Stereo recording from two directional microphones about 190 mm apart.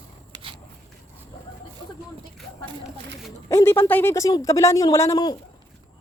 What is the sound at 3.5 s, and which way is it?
Speech, 15° left (ahead or behind).